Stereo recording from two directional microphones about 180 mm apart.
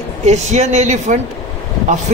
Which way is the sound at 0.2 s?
40° right (ahead or behind).